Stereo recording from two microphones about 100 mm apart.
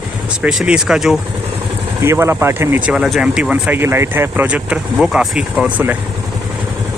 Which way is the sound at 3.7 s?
25° right (ahead or behind).